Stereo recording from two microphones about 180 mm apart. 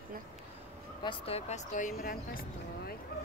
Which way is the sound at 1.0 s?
30° left (ahead or behind).